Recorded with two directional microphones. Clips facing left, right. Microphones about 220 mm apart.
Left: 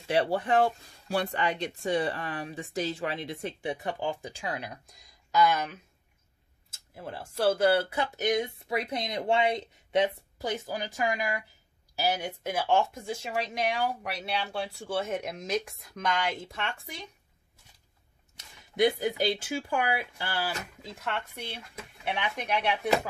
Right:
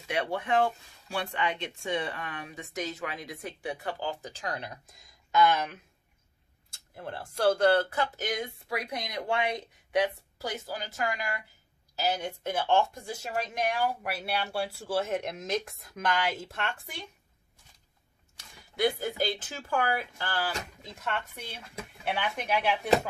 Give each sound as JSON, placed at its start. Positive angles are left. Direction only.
{"t": 0.1, "sound": "speech", "side_deg": 35}
{"t": 7.0, "sound": "speech", "side_deg": 5}
{"t": 18.3, "sound": "speech", "side_deg": 20}
{"t": 20.9, "sound": "speech", "side_deg": 0}